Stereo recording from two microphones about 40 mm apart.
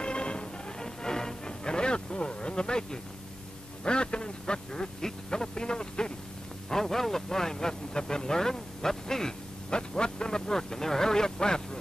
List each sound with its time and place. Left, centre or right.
0.0 s music: left
3.8 s quack: left
6.7 s speech: centre